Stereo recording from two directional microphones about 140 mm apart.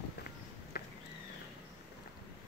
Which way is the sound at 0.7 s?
90° left.